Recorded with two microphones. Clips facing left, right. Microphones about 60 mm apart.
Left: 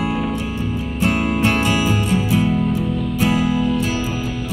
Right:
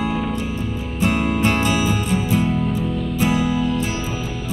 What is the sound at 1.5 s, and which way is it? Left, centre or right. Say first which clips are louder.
Music: left 1 dB; left.